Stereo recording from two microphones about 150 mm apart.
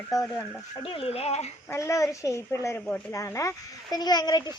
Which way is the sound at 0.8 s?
40° left (ahead or behind).